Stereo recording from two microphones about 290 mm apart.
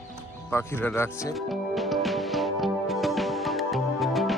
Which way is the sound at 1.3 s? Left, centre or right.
Centre.